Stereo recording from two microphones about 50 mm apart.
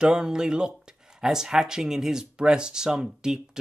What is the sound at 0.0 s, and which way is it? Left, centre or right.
Speech, centre.